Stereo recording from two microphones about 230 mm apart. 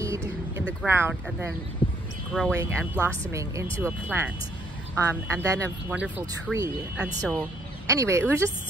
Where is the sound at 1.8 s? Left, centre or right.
Left.